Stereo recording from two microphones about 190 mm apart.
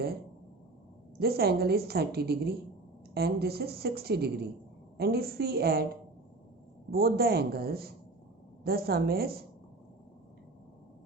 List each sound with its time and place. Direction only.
1.2 s a woman's voice: 55° right (ahead or behind)
6.9 s a woman's voice: 55° right (ahead or behind)